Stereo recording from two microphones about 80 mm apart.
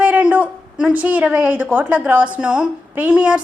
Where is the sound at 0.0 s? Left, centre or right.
Centre.